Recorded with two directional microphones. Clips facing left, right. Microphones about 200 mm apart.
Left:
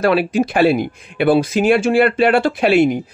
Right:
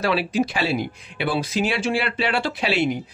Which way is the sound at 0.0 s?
55° left (ahead or behind).